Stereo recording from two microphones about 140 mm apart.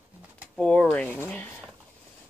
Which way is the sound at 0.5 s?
10° left (ahead or behind).